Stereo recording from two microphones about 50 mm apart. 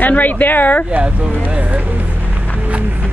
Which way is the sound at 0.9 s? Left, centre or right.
Right.